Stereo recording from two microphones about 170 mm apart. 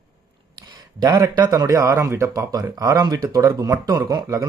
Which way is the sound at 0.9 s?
20° right (ahead or behind).